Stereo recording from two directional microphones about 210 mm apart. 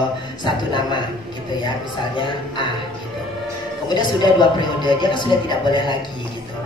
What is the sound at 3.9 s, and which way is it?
A woman's voice, 20° left (ahead or behind).